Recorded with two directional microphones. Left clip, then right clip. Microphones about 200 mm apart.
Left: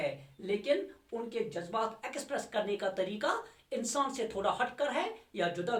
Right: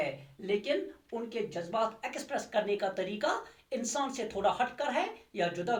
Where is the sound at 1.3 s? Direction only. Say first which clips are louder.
Right 1 dB; 15° left (ahead or behind).